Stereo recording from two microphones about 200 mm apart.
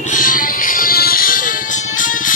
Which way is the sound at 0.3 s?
45° left (ahead or behind).